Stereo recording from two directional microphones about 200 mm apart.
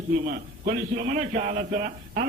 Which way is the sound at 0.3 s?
45° right (ahead or behind).